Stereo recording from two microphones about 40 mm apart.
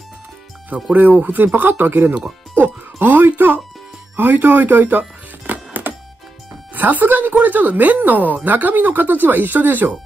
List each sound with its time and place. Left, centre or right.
0.7 s speech: right
1.2 s speech: right
2.5 s music: right
4.2 s speech: right
5.5 s music: right
6.7 s speech: right